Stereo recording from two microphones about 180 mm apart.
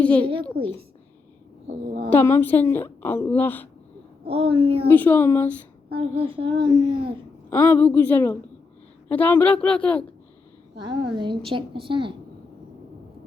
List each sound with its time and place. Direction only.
0.0 s a woman's voice: 10° left (ahead or behind)
0.6 s a woman's voice: 55° right (ahead or behind)
2.0 s a woman's voice: 10° left (ahead or behind)
4.3 s a child's voice: 30° right (ahead or behind)
4.9 s a woman's voice: 10° left (ahead or behind)
6.0 s a child's voice: 30° right (ahead or behind)
7.5 s a woman's voice: 10° left (ahead or behind)
11.1 s a child's voice: 25° right (ahead or behind)